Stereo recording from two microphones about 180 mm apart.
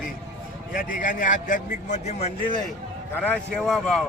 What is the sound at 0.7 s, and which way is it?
Speech, 50° left (ahead or behind).